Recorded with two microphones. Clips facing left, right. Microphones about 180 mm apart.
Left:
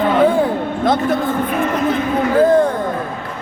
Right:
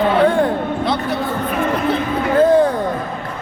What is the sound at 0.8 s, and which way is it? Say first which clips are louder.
Speech: left 8 dB; 45° left (ahead or behind).